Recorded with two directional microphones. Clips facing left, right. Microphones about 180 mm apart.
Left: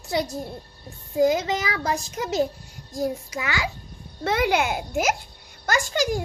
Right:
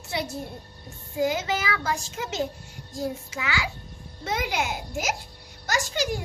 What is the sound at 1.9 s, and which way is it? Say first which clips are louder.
A child's voice: left 6 dB; 40° left (ahead or behind).